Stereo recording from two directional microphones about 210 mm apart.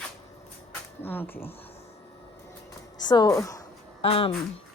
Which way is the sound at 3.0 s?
20° left (ahead or behind).